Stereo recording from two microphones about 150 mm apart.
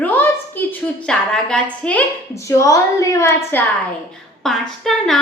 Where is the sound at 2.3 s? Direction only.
20° left (ahead or behind).